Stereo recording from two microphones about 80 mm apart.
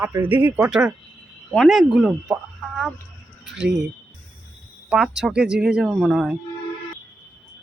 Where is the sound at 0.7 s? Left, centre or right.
Centre.